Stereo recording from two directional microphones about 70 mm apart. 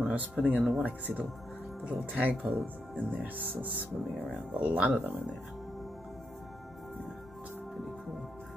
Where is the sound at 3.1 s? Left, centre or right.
Right.